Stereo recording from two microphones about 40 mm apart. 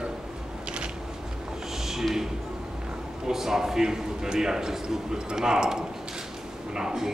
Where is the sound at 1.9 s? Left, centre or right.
Centre.